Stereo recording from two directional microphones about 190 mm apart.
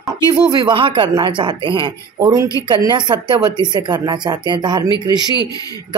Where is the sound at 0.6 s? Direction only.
25° right (ahead or behind).